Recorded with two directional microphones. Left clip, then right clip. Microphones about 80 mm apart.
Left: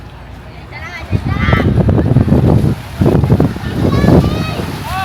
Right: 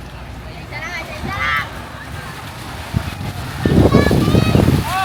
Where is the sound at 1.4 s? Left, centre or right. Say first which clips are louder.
Left 2 dB; centre.